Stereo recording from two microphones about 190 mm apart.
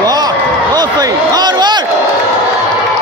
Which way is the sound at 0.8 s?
20° right (ahead or behind).